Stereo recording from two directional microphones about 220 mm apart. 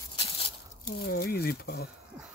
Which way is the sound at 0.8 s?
45° left (ahead or behind).